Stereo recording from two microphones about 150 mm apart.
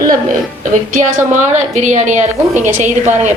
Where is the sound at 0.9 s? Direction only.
55° right (ahead or behind).